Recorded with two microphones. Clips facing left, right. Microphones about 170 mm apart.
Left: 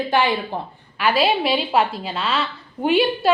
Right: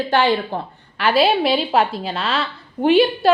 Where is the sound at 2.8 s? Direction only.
Centre (ahead or behind).